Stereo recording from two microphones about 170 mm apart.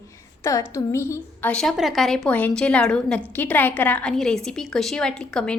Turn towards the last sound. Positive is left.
turn(degrees=5)  # may be behind; listen again after turning